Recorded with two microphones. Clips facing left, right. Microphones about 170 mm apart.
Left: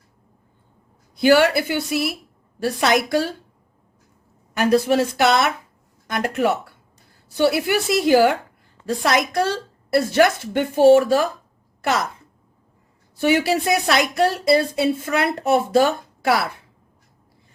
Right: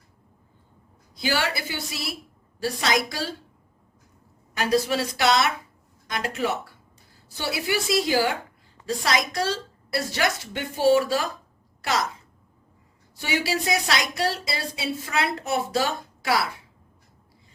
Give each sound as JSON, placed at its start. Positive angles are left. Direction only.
{"t": 1.1, "sound": "a woman's voice", "side_deg": 60}
{"t": 4.5, "sound": "a woman's voice", "side_deg": 55}
{"t": 13.1, "sound": "a woman's voice", "side_deg": 55}